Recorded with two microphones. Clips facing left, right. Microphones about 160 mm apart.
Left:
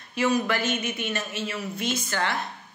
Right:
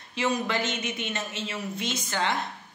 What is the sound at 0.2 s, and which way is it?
A woman's voice, 20° right (ahead or behind).